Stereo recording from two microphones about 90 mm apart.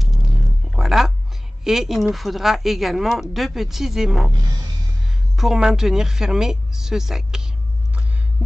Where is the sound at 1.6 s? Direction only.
5° right (ahead or behind).